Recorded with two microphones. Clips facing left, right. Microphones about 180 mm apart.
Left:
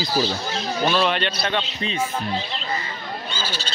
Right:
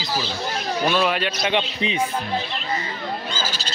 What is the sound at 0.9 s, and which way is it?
Speech, 5° right (ahead or behind).